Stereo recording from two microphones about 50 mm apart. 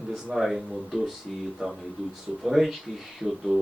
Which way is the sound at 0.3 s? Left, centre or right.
Centre.